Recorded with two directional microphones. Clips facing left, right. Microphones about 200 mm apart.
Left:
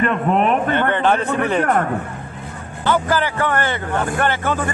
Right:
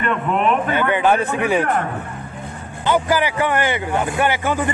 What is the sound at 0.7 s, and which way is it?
Speech, 10° right (ahead or behind).